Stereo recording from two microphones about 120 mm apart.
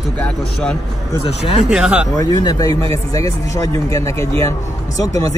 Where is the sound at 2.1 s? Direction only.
30° left (ahead or behind).